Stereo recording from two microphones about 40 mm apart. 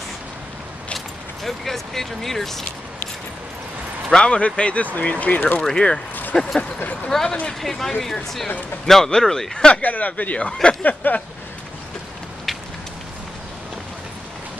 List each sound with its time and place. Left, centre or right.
0.9 s speech: centre
4.1 s speech: left
6.3 s speech: centre
9.8 s speech: left
10.8 s speech: left